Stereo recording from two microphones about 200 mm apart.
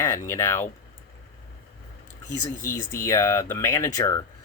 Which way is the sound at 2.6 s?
45° left (ahead or behind).